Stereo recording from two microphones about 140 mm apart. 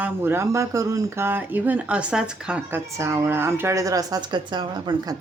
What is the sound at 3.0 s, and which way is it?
Speech, 20° right (ahead or behind).